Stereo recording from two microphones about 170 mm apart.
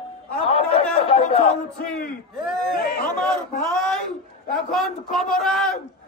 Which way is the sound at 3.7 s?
5° left (ahead or behind).